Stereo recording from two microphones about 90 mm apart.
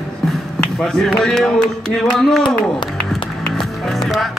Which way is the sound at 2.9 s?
5° left (ahead or behind).